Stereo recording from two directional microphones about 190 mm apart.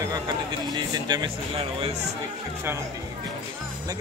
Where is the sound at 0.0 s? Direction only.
20° right (ahead or behind).